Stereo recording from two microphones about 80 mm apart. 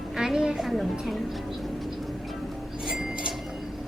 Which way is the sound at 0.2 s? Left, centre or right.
Centre.